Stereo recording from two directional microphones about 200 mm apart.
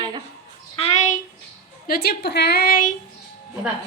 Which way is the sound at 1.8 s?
50° left (ahead or behind).